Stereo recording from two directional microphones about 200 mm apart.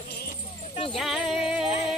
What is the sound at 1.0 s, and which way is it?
Music, centre (ahead or behind).